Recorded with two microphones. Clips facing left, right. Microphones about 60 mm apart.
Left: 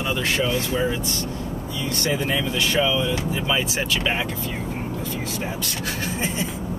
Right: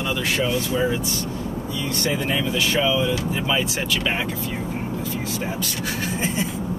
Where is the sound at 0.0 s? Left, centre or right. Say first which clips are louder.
Even; centre.